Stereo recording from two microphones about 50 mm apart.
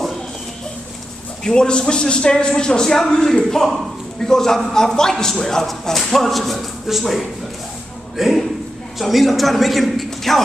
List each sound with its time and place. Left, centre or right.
1.4 s a man's voice: centre